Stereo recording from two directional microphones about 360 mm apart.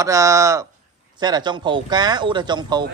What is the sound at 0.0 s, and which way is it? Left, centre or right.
Speech, centre.